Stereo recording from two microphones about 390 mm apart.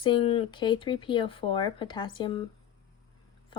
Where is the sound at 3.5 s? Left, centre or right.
Centre.